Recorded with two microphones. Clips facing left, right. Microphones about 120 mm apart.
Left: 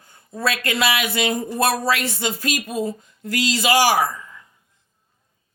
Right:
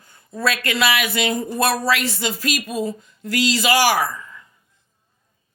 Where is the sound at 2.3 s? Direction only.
20° left (ahead or behind).